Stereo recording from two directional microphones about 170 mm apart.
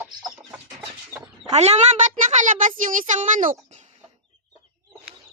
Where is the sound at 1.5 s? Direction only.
40° right (ahead or behind).